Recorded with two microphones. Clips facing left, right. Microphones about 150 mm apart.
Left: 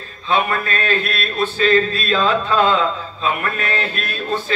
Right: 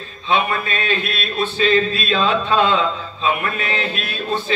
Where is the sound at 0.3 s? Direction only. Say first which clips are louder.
Even; 45° left (ahead or behind).